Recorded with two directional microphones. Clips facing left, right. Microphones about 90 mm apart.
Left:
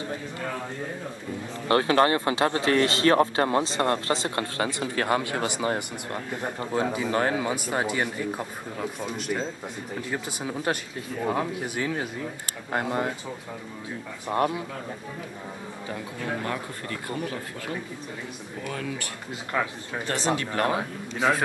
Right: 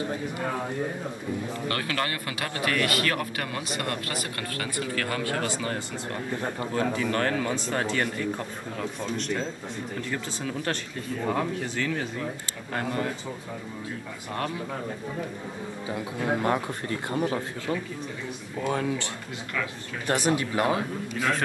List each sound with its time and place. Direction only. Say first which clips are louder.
1.7 s speech: left 11 dB; 25° left (ahead or behind)
14.3 s speech: left 7 dB; 20° left (ahead or behind)
16.2 s speech: right 6 dB; 25° right (ahead or behind)
18.6 s speech: right 6 dB; 30° right (ahead or behind)
19.5 s speech: left 4 dB; 35° left (ahead or behind)
20.3 s speech: right 1 dB; 10° right (ahead or behind)